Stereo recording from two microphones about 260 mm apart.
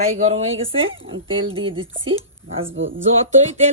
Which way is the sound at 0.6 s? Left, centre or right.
Right.